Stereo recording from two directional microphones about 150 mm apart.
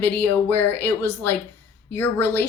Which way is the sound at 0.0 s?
10° left (ahead or behind).